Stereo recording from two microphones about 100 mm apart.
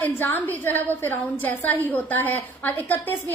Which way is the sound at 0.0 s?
20° left (ahead or behind).